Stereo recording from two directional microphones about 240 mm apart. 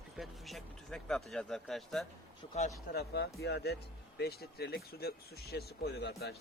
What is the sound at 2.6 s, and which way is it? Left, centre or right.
Speech, left.